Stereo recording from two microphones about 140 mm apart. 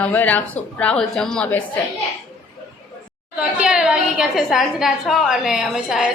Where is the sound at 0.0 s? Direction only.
10° left (ahead or behind).